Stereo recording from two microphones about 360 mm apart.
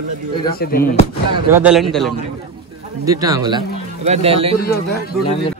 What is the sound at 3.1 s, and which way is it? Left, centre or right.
Speech, centre.